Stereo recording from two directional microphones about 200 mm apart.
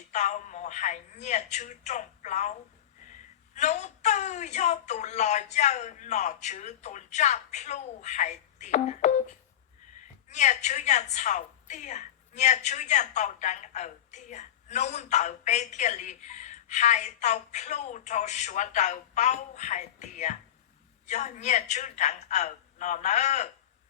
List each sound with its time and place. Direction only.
0.1 s a woman's voice: 35° left (ahead or behind)